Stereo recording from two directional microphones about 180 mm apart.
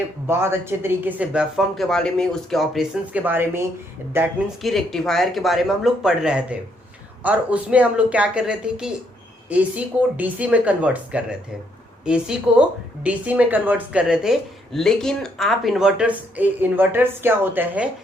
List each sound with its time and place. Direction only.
0.3 s a woman's voice: 15° right (ahead or behind)
4.6 s a woman's voice: centre (ahead or behind)